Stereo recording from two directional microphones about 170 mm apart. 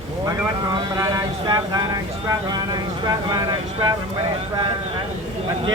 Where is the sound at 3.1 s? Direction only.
25° right (ahead or behind).